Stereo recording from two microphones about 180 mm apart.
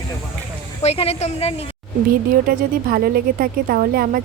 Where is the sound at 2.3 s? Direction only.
55° right (ahead or behind).